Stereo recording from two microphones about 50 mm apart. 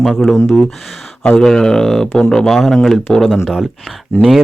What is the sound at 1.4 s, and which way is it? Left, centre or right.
Speech, centre.